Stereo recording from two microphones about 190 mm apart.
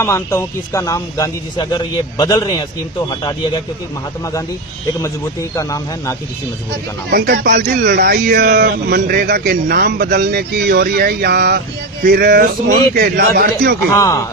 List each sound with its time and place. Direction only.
0.0 s speech: 15° left (ahead or behind)
4.9 s speech: 15° left (ahead or behind)
7.1 s speech: 50° right (ahead or behind)
7.9 s speech: 55° right (ahead or behind)
8.6 s speech: 50° right (ahead or behind)
13.9 s speech: 15° left (ahead or behind)